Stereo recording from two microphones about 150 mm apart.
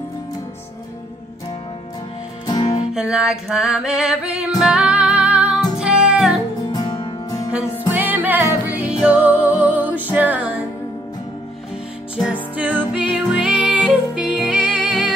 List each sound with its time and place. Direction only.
2.4 s music: 25° left (ahead or behind)
2.9 s music: 5° right (ahead or behind)
6.7 s music: 30° left (ahead or behind)
7.9 s music: 10° right (ahead or behind)
12.2 s music: 10° right (ahead or behind)